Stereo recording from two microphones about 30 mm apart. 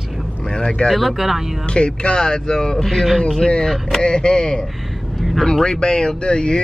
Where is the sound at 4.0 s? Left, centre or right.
Left.